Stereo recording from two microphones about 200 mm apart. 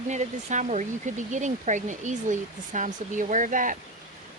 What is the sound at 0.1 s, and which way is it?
Speech, 35° right (ahead or behind).